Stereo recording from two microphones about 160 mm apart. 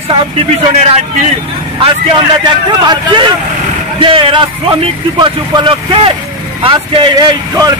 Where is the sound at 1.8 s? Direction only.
35° right (ahead or behind).